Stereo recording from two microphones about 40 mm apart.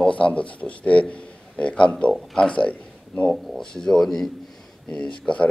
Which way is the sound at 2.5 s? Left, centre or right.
Left.